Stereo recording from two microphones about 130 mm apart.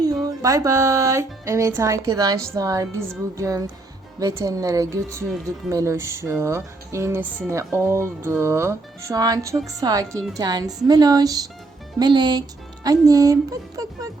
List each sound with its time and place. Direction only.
0.0 s a woman's voice: 30° right (ahead or behind)